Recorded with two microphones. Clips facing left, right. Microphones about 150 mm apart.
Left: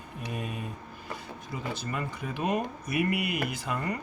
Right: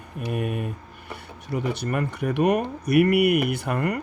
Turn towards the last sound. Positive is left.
turn(degrees=-65)  # may be behind; listen again after turning